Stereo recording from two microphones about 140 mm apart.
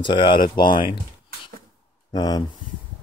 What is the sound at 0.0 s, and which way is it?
Speech, 35° left (ahead or behind).